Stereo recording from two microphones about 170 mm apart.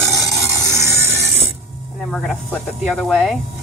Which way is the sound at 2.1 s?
Centre (ahead or behind).